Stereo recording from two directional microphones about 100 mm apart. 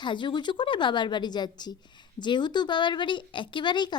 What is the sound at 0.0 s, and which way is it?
A woman's voice, 50° left (ahead or behind).